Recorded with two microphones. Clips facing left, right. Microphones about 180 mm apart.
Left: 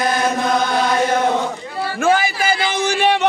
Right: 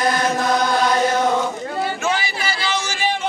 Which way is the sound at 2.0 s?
50° left (ahead or behind).